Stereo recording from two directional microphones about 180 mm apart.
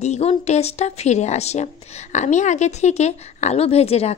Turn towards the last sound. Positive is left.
turn(degrees=35)  # may be behind; listen again after turning